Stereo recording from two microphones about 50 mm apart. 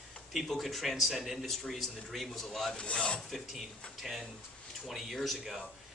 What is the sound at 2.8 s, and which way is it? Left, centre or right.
Filing, centre.